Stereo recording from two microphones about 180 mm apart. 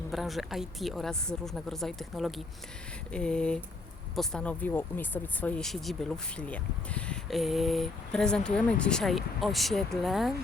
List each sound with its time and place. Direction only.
0.1 s speech: centre (ahead or behind)